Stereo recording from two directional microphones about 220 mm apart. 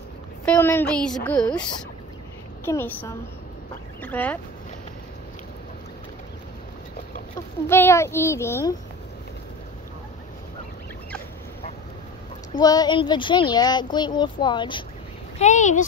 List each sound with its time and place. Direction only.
0.5 s a woman's voice: 10° left (ahead or behind)
2.6 s a child's voice: 10° left (ahead or behind)
7.6 s a child's voice: 10° left (ahead or behind)
12.5 s speech: 20° left (ahead or behind)
15.3 s speech: 30° left (ahead or behind)